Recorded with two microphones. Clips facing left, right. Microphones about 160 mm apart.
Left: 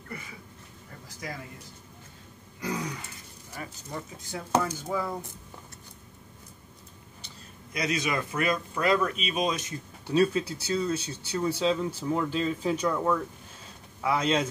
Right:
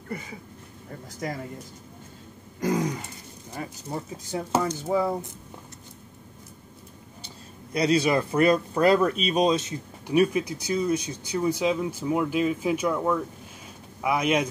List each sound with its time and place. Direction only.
2.6 s throat clearing: 45° right (ahead or behind)
3.5 s speech: 25° right (ahead or behind)
7.7 s speech: 35° right (ahead or behind)
10.0 s speech: 15° right (ahead or behind)